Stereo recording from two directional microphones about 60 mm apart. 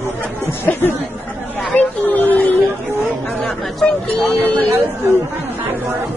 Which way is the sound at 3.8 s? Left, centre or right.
Centre.